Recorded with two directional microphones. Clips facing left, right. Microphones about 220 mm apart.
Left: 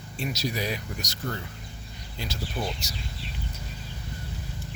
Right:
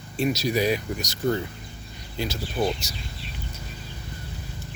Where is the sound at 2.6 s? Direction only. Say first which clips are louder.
Right 8 dB; 25° right (ahead or behind).